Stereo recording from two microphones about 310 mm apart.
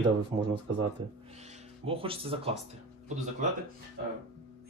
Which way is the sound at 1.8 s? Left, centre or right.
Centre.